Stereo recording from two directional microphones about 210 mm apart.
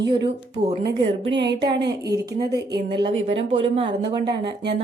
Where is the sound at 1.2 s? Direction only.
55° right (ahead or behind).